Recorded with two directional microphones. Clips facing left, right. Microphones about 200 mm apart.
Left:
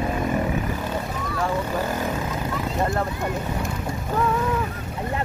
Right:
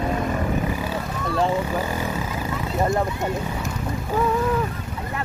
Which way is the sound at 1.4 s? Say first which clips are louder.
Right 2 dB; 10° right (ahead or behind).